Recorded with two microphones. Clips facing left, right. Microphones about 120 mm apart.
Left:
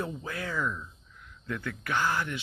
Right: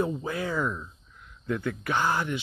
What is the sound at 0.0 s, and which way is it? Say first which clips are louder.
Speech: right 6 dB; 20° right (ahead or behind).